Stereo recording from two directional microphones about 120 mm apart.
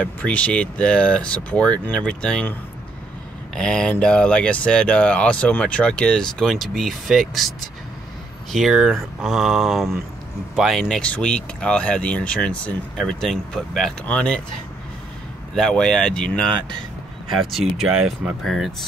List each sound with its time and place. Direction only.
0.0 s speech: 10° left (ahead or behind)
3.5 s speech: 5° left (ahead or behind)
15.5 s speech: 5° left (ahead or behind)